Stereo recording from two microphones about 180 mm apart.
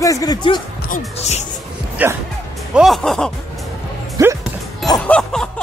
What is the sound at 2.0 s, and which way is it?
Speech, 10° right (ahead or behind).